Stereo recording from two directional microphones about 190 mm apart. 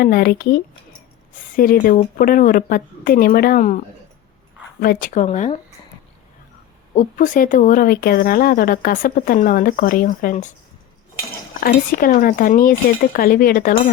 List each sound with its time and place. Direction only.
0.0 s speech: 50° left (ahead or behind)
6.9 s speech: 45° left (ahead or behind)
11.6 s speech: 50° left (ahead or behind)